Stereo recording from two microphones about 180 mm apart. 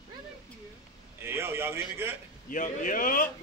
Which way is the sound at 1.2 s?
15° right (ahead or behind).